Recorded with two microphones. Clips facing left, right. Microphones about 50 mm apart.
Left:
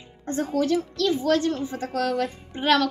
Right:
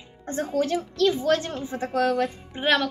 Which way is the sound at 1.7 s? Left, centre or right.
Centre.